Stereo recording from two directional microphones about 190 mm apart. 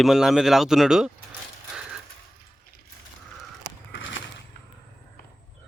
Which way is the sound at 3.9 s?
80° left.